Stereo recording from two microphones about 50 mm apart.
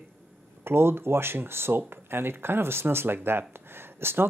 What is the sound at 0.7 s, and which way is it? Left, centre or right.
Speech, right.